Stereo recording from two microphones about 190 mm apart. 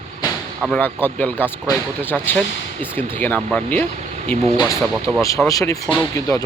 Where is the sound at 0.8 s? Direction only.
10° left (ahead or behind).